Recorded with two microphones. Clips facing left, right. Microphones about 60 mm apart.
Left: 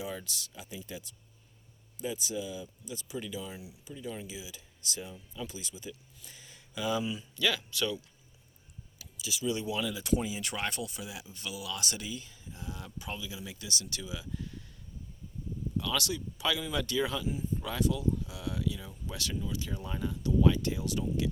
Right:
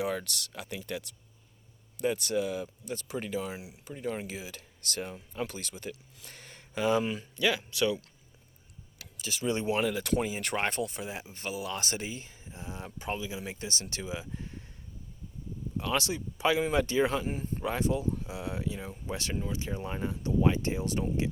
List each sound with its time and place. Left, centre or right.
0.0 s speech: right
2.0 s speech: right
3.8 s speech: right
7.3 s speech: right
9.1 s speech: right
15.8 s speech: right
17.6 s speech: right